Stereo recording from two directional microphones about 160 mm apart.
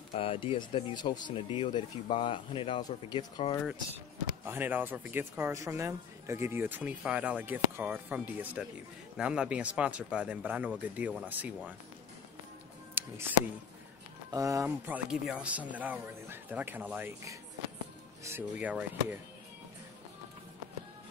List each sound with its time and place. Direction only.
0.1 s speech: 35° left (ahead or behind)
4.5 s speech: 10° right (ahead or behind)
13.0 s music: 10° right (ahead or behind)
14.3 s speech: 20° right (ahead or behind)
14.9 s speech: 5° right (ahead or behind)